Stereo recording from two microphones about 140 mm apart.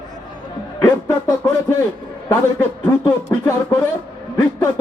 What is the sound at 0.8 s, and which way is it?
A man's voice, 20° left (ahead or behind).